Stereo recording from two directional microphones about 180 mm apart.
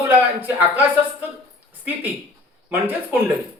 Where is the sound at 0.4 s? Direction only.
10° right (ahead or behind).